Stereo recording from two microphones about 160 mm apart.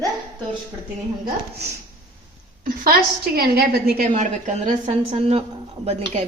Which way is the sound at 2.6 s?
70° right (ahead or behind).